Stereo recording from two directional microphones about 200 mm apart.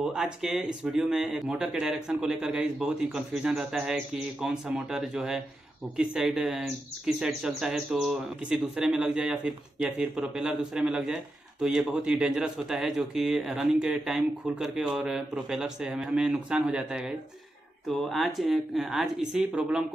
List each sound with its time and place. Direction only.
0.0 s speech: 5° right (ahead or behind)